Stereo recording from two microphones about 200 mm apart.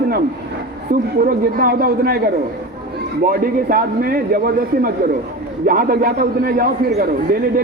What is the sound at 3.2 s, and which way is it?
A man's voice, 45° right (ahead or behind).